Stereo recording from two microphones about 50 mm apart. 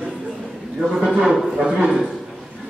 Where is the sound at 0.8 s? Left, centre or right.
Centre.